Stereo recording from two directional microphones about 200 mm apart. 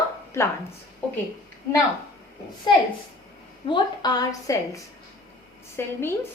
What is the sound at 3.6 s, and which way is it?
Speech, 20° left (ahead or behind).